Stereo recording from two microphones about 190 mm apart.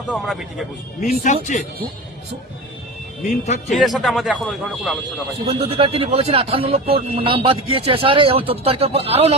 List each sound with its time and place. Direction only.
0.1 s speech: centre (ahead or behind)
1.0 s speech: 45° left (ahead or behind)
3.2 s speech: 35° left (ahead or behind)
3.7 s speech: centre (ahead or behind)
5.5 s speech: 30° right (ahead or behind)